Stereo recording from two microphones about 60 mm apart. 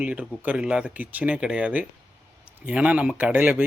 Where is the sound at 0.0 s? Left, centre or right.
Right.